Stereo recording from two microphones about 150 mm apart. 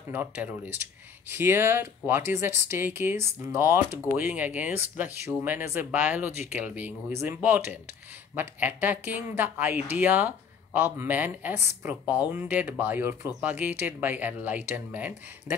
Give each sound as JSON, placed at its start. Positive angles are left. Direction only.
{"t": 0.1, "sound": "speech", "side_deg": -10}